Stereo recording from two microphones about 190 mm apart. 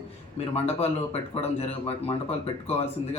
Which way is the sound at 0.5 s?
35° left (ahead or behind).